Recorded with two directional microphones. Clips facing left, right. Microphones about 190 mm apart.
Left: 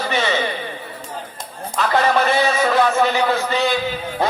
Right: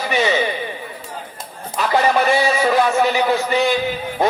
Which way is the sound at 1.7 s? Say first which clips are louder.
Right 1 dB; 15° right (ahead or behind).